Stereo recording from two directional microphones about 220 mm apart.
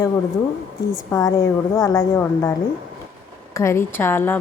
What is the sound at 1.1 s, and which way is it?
Speech, 15° left (ahead or behind).